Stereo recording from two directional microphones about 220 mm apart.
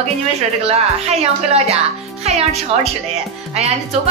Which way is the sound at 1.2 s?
30° right (ahead or behind).